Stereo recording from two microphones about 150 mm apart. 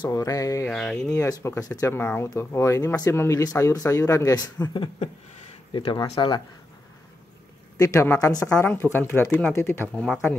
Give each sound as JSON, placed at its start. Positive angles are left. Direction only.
{"t": 0.0, "sound": "speech", "side_deg": 20}
{"t": 0.7, "sound": "speech", "side_deg": 5}
{"t": 1.1, "sound": "speech", "side_deg": 20}
{"t": 7.7, "sound": "speech", "side_deg": 20}